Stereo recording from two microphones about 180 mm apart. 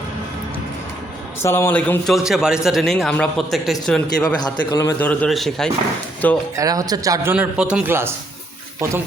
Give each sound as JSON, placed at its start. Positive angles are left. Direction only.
{"t": 1.4, "sound": "speech", "side_deg": 15}
{"t": 4.4, "sound": "a man's voice", "side_deg": 25}
{"t": 4.9, "sound": "speech", "side_deg": 5}
{"t": 6.6, "sound": "speech", "side_deg": -20}
{"t": 7.3, "sound": "a man's voice", "side_deg": -5}